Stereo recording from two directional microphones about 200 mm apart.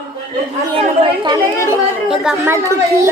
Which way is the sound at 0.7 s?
25° right (ahead or behind).